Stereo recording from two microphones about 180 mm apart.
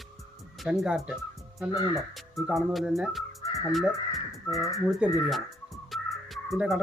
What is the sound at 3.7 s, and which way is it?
Speech, centre (ahead or behind).